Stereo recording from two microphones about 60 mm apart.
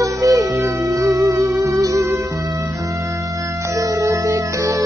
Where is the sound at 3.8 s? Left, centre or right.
Right.